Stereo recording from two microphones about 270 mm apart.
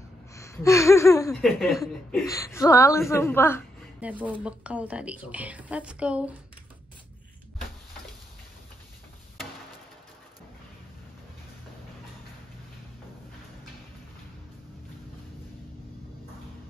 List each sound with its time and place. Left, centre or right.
0.3 s a sound: centre
1.3 s a woman's voice: centre
4.0 s speech: centre